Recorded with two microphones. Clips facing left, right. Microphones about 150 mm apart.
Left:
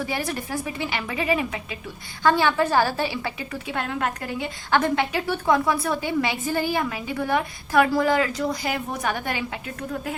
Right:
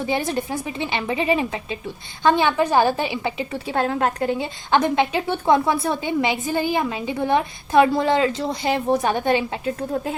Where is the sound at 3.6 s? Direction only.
35° right (ahead or behind).